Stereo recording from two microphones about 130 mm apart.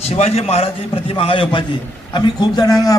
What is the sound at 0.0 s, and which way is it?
Speech, 55° left (ahead or behind).